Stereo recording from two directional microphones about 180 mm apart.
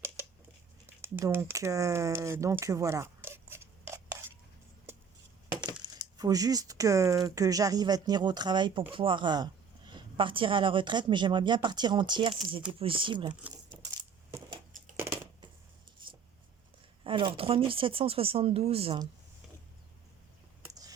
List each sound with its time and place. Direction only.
1.0 s speech: 10° right (ahead or behind)
5.6 s a woman's voice: 25° right (ahead or behind)
14.9 s a sound: 15° right (ahead or behind)
16.0 s writing: 25° right (ahead or behind)
17.0 s speech: 30° right (ahead or behind)
20.6 s a sound: 20° right (ahead or behind)